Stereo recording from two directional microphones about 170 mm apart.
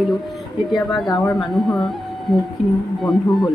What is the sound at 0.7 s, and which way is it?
Speech, centre (ahead or behind).